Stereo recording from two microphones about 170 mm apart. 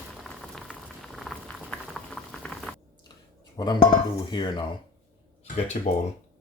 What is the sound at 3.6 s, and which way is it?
Speech, 25° left (ahead or behind).